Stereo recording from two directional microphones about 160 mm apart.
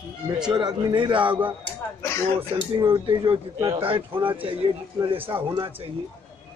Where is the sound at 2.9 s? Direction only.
30° right (ahead or behind).